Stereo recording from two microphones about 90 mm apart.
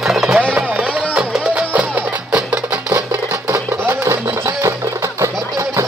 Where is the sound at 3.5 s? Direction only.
30° right (ahead or behind).